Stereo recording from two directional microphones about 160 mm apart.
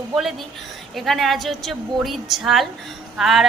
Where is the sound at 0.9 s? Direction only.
Centre (ahead or behind).